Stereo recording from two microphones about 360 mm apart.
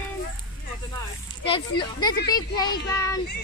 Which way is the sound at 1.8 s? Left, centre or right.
Centre.